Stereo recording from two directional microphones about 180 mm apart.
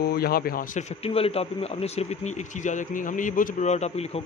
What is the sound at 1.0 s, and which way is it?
Speech, 35° left (ahead or behind).